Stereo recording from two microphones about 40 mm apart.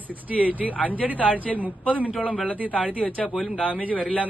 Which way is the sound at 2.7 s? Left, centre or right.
Left.